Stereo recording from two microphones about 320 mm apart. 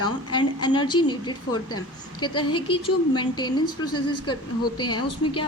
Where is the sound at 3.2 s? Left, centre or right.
Centre.